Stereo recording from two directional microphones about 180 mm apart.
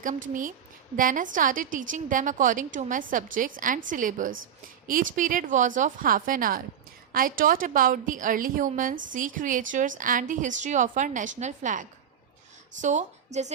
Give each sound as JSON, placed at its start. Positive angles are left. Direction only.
{"t": 0.9, "sound": "a woman's voice", "side_deg": -50}